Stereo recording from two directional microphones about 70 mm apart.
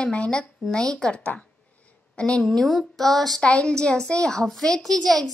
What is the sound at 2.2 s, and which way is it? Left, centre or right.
A woman's voice, centre.